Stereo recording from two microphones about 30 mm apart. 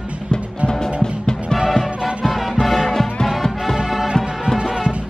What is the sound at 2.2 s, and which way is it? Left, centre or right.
Music, centre.